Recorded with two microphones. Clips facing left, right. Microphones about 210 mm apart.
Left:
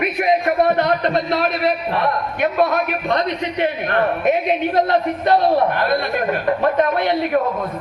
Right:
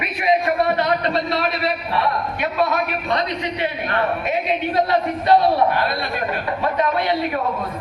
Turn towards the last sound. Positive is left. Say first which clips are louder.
# left 3 dB
turn(degrees=50)  # may be behind; listen again after turning